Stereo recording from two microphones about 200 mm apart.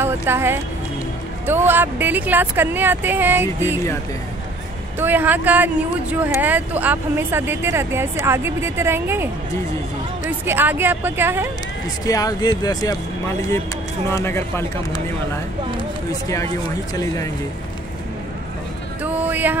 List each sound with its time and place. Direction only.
0.0 s speech: 10° right (ahead or behind)
4.9 s speech: 10° right (ahead or behind)
10.4 s speech: 10° right (ahead or behind)
12.1 s speech: 20° left (ahead or behind)
16.1 s speech: 15° left (ahead or behind)
19.0 s a sound: 10° right (ahead or behind)